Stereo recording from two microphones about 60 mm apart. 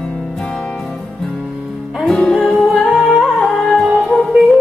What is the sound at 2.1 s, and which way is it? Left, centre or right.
Music, centre.